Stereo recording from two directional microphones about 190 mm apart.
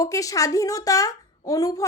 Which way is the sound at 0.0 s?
20° left (ahead or behind).